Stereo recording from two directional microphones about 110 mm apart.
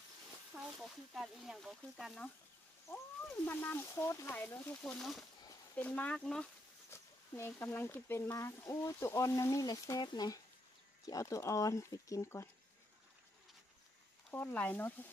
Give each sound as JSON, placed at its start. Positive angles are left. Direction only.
{"t": 0.7, "sound": "speech", "side_deg": 0}
{"t": 3.4, "sound": "speech", "side_deg": 20}
{"t": 4.8, "sound": "speech", "side_deg": 5}
{"t": 5.8, "sound": "speech", "side_deg": 15}
{"t": 6.9, "sound": "speech", "side_deg": 20}
{"t": 14.3, "sound": "speech", "side_deg": 15}